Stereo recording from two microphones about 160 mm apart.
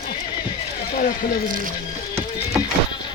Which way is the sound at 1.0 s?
65° left (ahead or behind).